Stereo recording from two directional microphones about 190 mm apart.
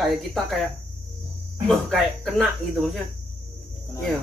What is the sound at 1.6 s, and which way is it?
Speech, centre (ahead or behind).